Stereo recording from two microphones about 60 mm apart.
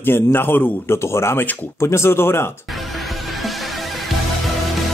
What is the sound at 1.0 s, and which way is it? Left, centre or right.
Speech, left.